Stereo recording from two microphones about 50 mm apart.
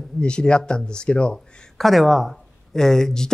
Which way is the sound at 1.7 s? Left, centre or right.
Centre.